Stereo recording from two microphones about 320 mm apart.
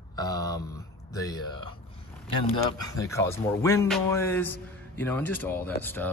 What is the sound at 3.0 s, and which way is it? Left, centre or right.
A man's voice, centre.